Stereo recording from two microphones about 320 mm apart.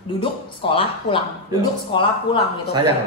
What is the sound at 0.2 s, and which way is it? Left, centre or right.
Speech, centre.